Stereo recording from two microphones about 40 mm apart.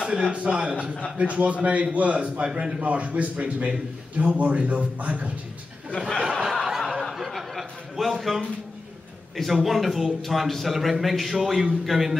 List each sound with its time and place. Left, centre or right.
0.0 s a sound: centre
0.6 s a man's voice: right
2.8 s a man's voice: right
5.9 s speech: centre
6.5 s snicker: centre
7.0 s chuckle: centre
9.6 s speech: centre